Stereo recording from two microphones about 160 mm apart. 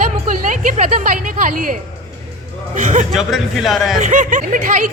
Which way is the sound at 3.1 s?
Centre (ahead or behind).